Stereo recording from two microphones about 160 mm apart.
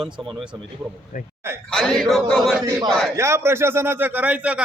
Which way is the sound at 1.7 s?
Centre (ahead or behind).